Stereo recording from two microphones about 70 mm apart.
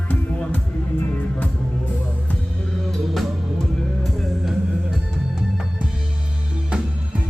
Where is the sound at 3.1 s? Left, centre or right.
Centre.